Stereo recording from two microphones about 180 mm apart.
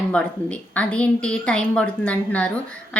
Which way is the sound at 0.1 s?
5° left (ahead or behind).